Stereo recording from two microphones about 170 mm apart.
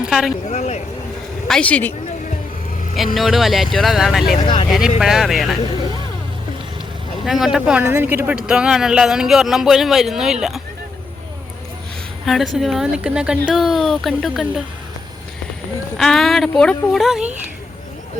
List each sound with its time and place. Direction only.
0.0 s a sound: 5° right (ahead or behind)
0.4 s speech: 40° left (ahead or behind)
1.5 s a woman's voice: 5° left (ahead or behind)
3.2 s speech: centre (ahead or behind)
4.4 s speech: 30° left (ahead or behind)
4.9 s speech: centre (ahead or behind)
7.3 s speech: centre (ahead or behind)
12.2 s a woman's voice: centre (ahead or behind)
16.0 s speech: centre (ahead or behind)